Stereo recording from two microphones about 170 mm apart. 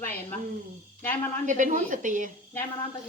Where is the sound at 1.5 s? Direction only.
50° right (ahead or behind).